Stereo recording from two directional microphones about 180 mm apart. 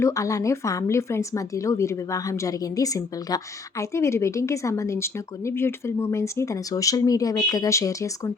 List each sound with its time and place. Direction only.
0.0 s a woman's voice: 20° left (ahead or behind)